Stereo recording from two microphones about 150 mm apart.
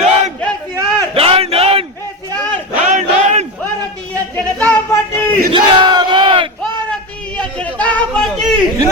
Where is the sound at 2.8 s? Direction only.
50° right (ahead or behind).